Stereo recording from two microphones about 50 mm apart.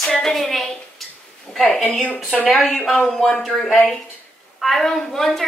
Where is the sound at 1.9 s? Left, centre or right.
Left.